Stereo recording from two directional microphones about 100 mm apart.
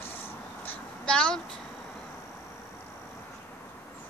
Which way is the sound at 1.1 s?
10° left (ahead or behind).